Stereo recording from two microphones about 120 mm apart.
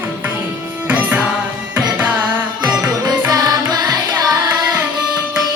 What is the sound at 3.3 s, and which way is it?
Music, 35° right (ahead or behind).